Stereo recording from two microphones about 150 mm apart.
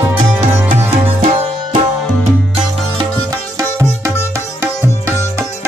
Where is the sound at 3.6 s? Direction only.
20° right (ahead or behind).